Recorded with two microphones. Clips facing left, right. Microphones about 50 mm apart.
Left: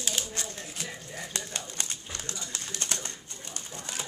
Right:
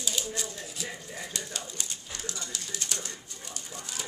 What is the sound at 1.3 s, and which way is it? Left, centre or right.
Pigeon, left.